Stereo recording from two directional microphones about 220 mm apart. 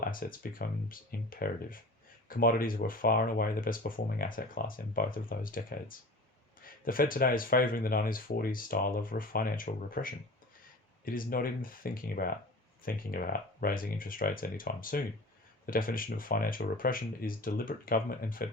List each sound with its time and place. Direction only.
0.0 s speech: 40° left (ahead or behind)